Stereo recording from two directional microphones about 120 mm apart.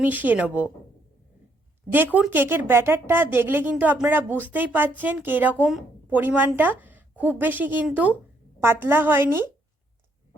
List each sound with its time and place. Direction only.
0.0 s a woman's voice: 15° right (ahead or behind)
2.1 s a woman's voice: 15° right (ahead or behind)